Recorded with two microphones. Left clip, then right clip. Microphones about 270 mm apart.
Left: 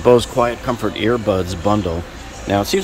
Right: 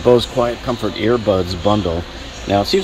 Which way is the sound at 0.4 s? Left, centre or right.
Centre.